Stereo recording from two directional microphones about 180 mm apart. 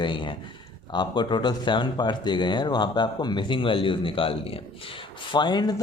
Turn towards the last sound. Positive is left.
turn(degrees=20)  # may be behind; listen again after turning